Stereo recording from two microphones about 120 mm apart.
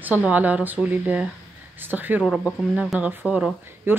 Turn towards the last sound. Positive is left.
turn(degrees=-10)  # may be behind; listen again after turning